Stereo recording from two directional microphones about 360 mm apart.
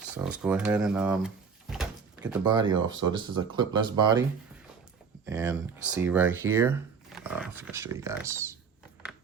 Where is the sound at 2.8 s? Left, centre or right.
Right.